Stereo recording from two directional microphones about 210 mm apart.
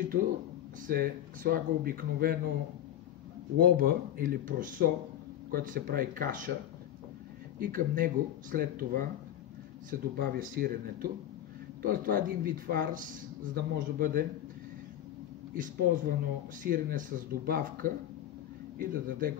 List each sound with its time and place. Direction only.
0.8 s speech: 45° right (ahead or behind)
3.5 s speech: 45° right (ahead or behind)
7.6 s speech: 40° right (ahead or behind)
15.5 s speech: 40° right (ahead or behind)